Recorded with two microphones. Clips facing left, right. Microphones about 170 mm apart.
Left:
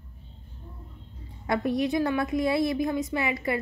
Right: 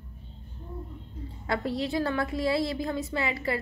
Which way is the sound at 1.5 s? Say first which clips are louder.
Left 4 dB; 20° left (ahead or behind).